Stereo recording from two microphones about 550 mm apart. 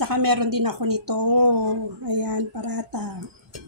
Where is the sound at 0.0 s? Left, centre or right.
Right.